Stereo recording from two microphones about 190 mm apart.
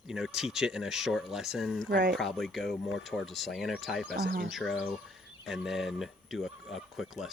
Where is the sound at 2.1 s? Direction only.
Centre (ahead or behind).